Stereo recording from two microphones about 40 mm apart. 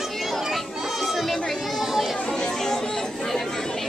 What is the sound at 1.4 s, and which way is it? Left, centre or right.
Children playing, centre.